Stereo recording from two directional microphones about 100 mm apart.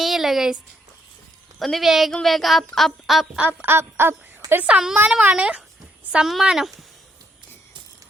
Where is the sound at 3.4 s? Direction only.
15° right (ahead or behind).